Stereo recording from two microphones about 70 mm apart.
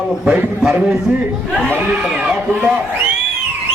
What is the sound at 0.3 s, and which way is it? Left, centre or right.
Speech, centre.